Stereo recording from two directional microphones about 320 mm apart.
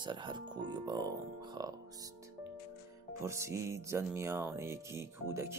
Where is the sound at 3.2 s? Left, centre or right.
Centre.